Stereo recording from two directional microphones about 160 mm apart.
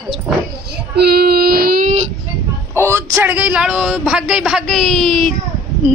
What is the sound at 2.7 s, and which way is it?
A woman's voice, 15° right (ahead or behind).